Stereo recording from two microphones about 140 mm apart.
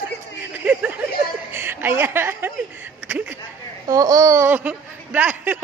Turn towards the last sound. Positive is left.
turn(degrees=-10)  # may be behind; listen again after turning